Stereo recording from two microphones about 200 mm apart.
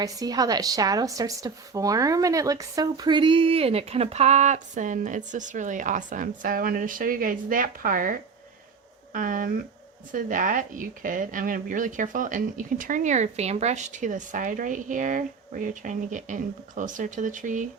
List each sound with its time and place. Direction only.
0.0 s a woman's voice: 15° right (ahead or behind); by 17.7 s 40° right (ahead or behind)